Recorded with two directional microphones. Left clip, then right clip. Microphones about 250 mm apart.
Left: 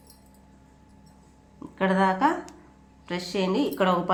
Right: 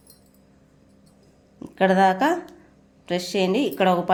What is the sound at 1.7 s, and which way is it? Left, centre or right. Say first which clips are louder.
A woman's voice: right 5 dB; right.